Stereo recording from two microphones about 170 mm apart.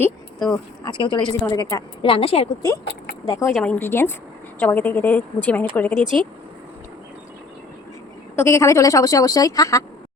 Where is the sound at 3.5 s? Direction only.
5° left (ahead or behind).